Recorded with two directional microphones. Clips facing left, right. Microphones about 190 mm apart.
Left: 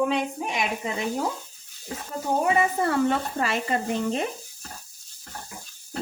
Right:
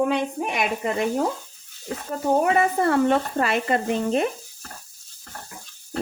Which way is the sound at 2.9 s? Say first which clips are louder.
Right 4 dB; 60° right (ahead or behind).